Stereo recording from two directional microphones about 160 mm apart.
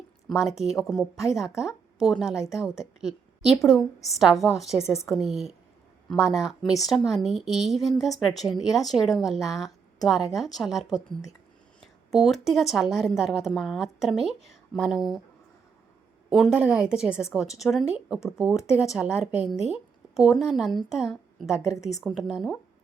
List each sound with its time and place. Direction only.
0.3 s a woman's voice: 5° right (ahead or behind)
16.3 s a woman's voice: 5° right (ahead or behind)
21.8 s a woman's voice: 20° left (ahead or behind)
22.0 s a woman's voice: centre (ahead or behind)